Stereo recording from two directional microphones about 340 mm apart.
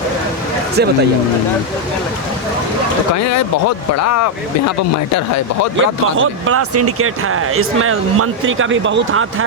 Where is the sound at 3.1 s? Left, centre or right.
Left.